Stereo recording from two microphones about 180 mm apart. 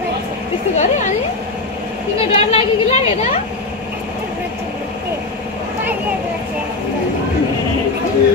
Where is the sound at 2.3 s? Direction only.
35° left (ahead or behind).